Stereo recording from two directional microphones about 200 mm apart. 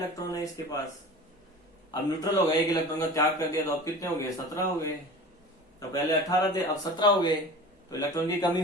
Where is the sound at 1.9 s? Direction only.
20° left (ahead or behind).